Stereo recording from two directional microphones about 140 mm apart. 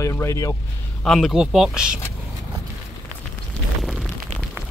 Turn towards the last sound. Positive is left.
turn(degrees=0)  # may be behind; listen again after turning